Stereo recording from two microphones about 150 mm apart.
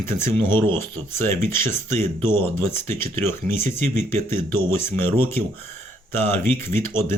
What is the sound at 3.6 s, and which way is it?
Speech, 50° right (ahead or behind).